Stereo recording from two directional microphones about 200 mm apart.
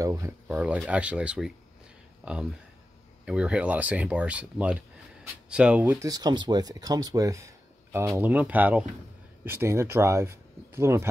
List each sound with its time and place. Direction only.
0.0 s speech: 15° right (ahead or behind)